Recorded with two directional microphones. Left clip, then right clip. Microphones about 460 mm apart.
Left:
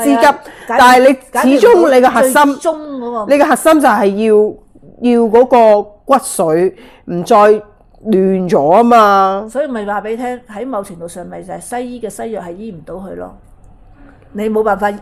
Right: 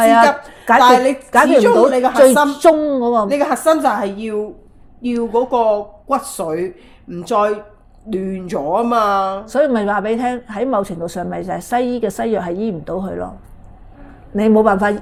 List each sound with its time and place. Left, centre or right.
0.2 s a woman's voice: left
2.6 s a woman's voice: centre
3.2 s a woman's voice: left
9.5 s a woman's voice: centre
14.3 s a woman's voice: centre